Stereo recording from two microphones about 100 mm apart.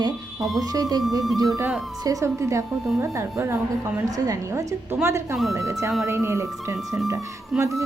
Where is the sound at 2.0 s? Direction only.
30° right (ahead or behind).